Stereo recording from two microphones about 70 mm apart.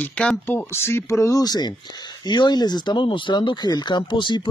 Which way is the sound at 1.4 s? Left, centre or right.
Left.